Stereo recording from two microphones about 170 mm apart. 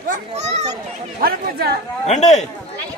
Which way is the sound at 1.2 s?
65° right (ahead or behind).